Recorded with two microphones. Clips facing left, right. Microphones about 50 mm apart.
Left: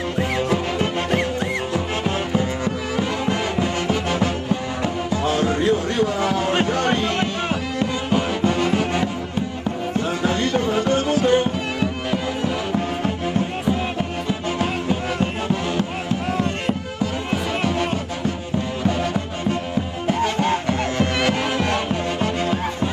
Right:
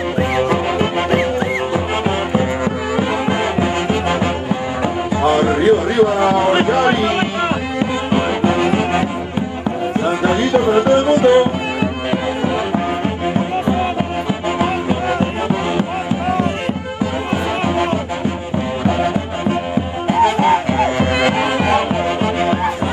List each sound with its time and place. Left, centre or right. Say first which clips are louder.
0.2 s music: right 5 dB; centre
2.3 s music: right 5 dB; right
8.1 s music: right 5 dB; right; by 11.4 s centre
11.8 s music: right 4 dB; right
20.1 s music: right 8 dB; centre